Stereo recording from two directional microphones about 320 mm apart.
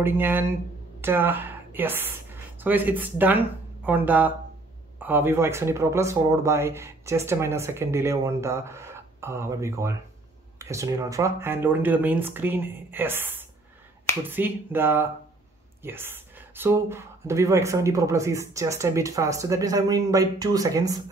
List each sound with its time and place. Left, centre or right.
0.0 s speech: centre